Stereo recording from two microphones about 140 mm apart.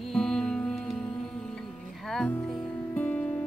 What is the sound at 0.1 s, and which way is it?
Music, 5° left (ahead or behind).